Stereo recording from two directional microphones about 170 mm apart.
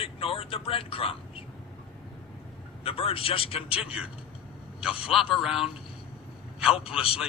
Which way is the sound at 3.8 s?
5° right (ahead or behind).